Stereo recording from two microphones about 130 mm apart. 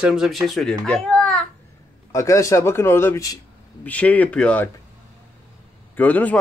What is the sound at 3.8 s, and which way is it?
Speech, 10° left (ahead or behind).